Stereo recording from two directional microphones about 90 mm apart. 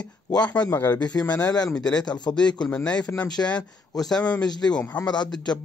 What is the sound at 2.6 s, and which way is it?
Speech, 10° left (ahead or behind).